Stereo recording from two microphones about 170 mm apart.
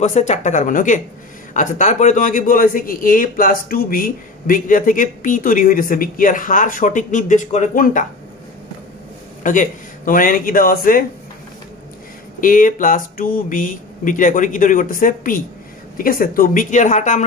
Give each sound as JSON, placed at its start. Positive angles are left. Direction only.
{"t": 0.0, "sound": "speech", "side_deg": 45}
{"t": 9.4, "sound": "speech", "side_deg": 50}
{"t": 12.4, "sound": "speech", "side_deg": 55}